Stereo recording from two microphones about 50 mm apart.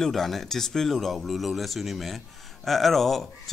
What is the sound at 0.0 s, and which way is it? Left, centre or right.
Speech, centre.